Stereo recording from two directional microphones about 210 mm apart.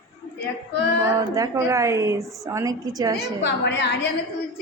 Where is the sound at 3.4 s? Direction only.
55° left (ahead or behind).